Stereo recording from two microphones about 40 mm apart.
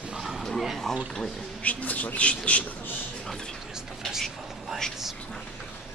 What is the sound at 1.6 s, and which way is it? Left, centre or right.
A man's voice, left.